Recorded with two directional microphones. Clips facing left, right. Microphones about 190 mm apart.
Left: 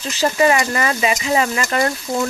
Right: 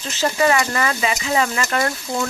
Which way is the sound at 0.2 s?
20° left (ahead or behind).